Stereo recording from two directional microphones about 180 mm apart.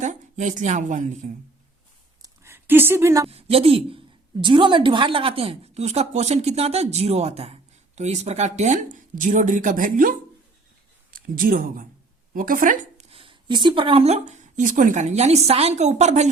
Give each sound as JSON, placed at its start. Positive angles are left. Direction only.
{"t": 0.0, "sound": "a woman's voice", "side_deg": -45}
{"t": 2.2, "sound": "a sound", "side_deg": -15}
{"t": 3.2, "sound": "a woman's voice", "side_deg": -35}
{"t": 13.1, "sound": "speech", "side_deg": -30}